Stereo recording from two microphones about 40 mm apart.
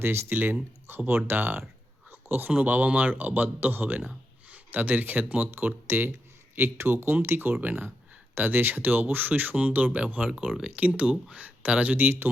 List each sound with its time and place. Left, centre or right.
0.0 s speech: right
0.3 s speech: right
0.9 s speech: right
2.0 s a sound: right
2.5 s speech: right
6.6 s speech: right
7.6 s speech: right
8.4 s speech: right
11.6 s speech: right
11.9 s speech: right